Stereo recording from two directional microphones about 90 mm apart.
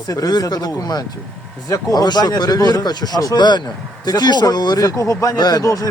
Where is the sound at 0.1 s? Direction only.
45° left (ahead or behind).